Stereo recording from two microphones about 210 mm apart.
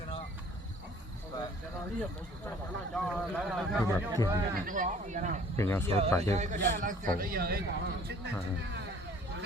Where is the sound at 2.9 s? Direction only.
Centre (ahead or behind).